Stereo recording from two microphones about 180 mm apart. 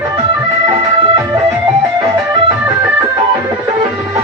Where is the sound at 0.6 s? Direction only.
20° right (ahead or behind).